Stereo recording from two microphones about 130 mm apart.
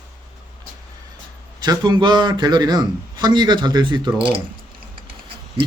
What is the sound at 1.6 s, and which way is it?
A man's voice, 35° right (ahead or behind).